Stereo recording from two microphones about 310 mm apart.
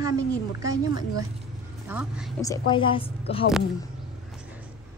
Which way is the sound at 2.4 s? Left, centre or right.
Centre.